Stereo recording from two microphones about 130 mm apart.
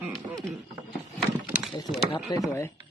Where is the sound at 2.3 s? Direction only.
25° left (ahead or behind).